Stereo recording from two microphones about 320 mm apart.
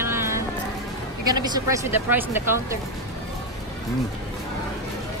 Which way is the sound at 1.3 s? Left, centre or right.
Centre.